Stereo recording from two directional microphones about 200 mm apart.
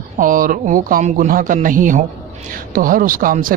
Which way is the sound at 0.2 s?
40° right (ahead or behind).